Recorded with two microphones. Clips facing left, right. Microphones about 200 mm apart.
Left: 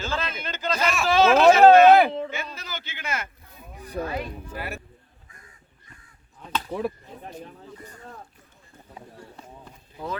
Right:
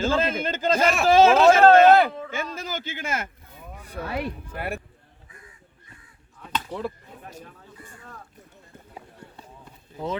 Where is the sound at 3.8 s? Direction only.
35° left (ahead or behind).